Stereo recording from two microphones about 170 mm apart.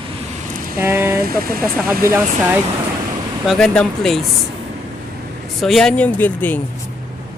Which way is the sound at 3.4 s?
Centre (ahead or behind).